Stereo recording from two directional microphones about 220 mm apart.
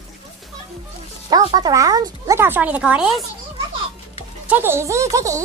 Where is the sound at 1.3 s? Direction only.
15° right (ahead or behind); by 3.2 s centre (ahead or behind).